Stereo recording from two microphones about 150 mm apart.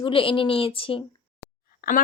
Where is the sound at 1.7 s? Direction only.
70° left (ahead or behind).